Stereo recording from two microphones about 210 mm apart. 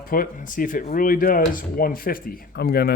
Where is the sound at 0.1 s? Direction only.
40° left (ahead or behind).